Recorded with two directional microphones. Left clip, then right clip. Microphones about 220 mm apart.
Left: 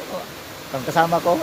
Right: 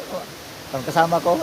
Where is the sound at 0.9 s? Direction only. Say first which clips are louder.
Even; 5° right (ahead or behind).